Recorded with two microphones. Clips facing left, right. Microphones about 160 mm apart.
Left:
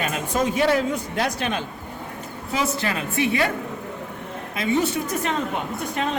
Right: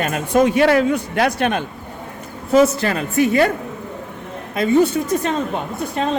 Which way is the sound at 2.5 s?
45° right (ahead or behind).